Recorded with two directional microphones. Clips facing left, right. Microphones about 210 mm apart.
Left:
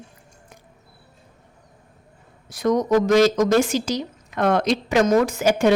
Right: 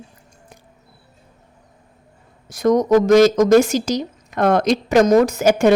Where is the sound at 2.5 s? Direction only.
45° right (ahead or behind).